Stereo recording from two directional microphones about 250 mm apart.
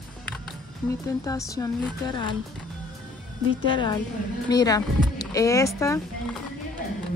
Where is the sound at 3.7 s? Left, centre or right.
Centre.